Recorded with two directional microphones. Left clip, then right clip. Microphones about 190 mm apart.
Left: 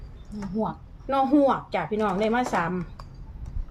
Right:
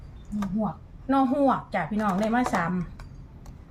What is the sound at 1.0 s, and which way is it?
Speech, 20° left (ahead or behind).